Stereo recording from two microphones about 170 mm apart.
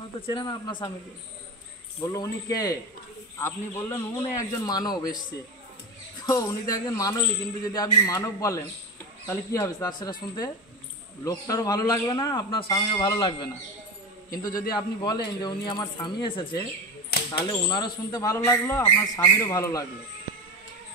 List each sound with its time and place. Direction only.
0.3 s speech: 30° left (ahead or behind)
2.0 s speech: 20° left (ahead or behind)
6.2 s speech: 20° left (ahead or behind)
14.3 s speech: 20° left (ahead or behind)
17.1 s a sound: 70° left (ahead or behind)
17.5 s speech: 25° left (ahead or behind)